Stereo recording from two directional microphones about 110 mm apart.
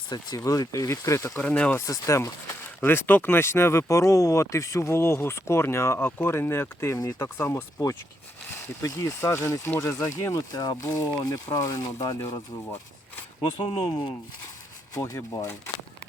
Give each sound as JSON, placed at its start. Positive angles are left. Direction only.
{"t": 0.1, "sound": "speech", "side_deg": 35}
{"t": 1.4, "sound": "speech", "side_deg": 10}
{"t": 1.9, "sound": "speech", "side_deg": 30}
{"t": 8.8, "sound": "speech", "side_deg": 30}
{"t": 13.7, "sound": "speech", "side_deg": 50}
{"t": 14.9, "sound": "speech", "side_deg": 35}